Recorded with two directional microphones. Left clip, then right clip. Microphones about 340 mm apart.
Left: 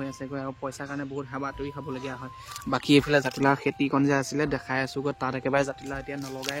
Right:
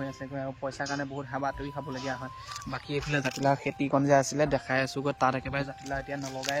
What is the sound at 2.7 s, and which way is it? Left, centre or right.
Speech, centre.